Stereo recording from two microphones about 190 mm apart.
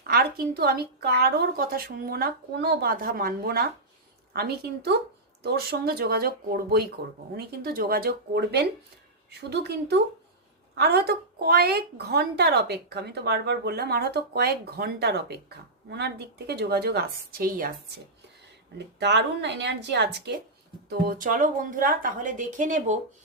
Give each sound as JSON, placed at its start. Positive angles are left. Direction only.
{"t": 0.1, "sound": "a woman's voice", "side_deg": -55}
{"t": 18.9, "sound": "a woman's voice", "side_deg": -65}
{"t": 20.9, "sound": "a woman's voice", "side_deg": -50}